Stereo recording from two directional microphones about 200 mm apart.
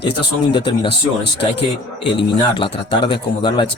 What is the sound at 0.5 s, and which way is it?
Speech, 25° left (ahead or behind).